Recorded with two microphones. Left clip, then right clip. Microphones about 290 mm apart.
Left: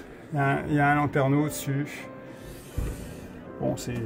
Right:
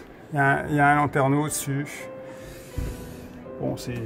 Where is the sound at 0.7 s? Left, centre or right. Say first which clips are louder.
Right 2 dB; right.